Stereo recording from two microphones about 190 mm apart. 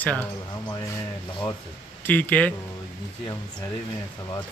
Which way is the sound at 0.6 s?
20° left (ahead or behind).